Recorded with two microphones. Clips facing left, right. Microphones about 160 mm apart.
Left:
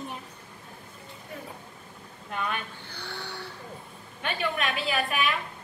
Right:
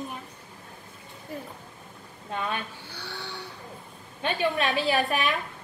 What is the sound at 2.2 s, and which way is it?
Speech, 30° right (ahead or behind).